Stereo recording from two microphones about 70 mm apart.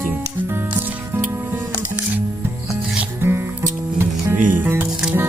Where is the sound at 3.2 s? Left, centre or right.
Right.